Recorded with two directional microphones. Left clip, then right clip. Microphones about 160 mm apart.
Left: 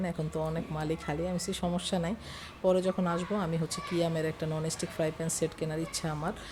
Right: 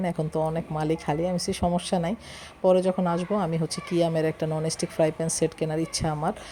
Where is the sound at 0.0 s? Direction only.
30° right (ahead or behind).